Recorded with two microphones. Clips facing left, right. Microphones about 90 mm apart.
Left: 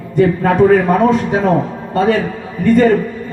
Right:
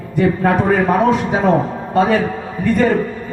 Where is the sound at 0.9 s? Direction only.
5° right (ahead or behind).